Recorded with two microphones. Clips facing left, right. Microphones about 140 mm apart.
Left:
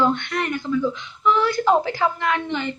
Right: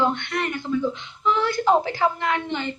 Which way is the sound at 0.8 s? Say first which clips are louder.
Left 3 dB; 20° right (ahead or behind).